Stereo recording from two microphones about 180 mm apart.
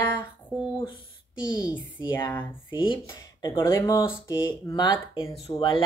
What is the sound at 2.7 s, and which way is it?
Speech, 30° left (ahead or behind).